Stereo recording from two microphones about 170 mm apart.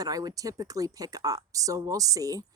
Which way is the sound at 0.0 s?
20° right (ahead or behind).